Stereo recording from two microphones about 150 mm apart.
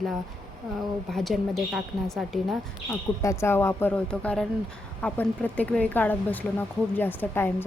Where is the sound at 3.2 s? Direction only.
20° left (ahead or behind).